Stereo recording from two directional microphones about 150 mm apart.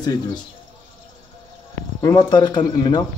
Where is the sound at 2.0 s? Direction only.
30° left (ahead or behind).